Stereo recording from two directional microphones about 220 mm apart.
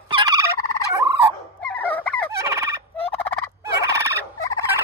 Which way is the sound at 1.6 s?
5° left (ahead or behind).